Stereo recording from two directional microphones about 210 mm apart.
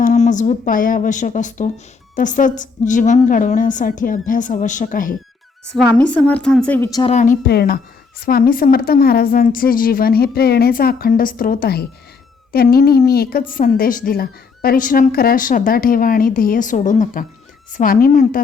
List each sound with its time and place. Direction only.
0.0 s a woman's voice: 35° left (ahead or behind)
5.6 s a woman's voice: 5° left (ahead or behind)
7.0 s a woman's voice: 35° left (ahead or behind)
7.4 s a woman's voice: 50° left (ahead or behind)